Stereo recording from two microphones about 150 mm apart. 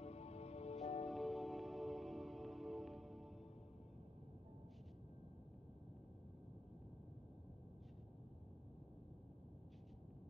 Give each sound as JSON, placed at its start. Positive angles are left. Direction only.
{"t": 0.0, "sound": "music", "side_deg": 45}
{"t": 1.0, "sound": "music", "side_deg": 0}